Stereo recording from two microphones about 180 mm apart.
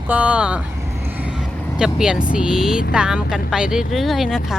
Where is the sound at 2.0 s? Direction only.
5° right (ahead or behind).